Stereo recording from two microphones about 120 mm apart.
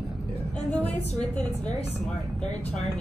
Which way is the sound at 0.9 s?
65° left (ahead or behind).